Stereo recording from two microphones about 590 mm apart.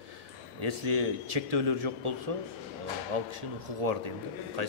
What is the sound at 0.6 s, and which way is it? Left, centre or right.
A man's voice, right.